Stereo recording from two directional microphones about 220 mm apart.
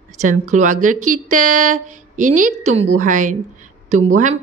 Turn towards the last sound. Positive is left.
turn(degrees=-35)  # may be behind; listen again after turning